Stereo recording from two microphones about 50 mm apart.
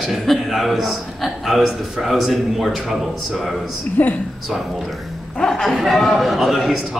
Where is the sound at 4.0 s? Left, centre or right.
Left.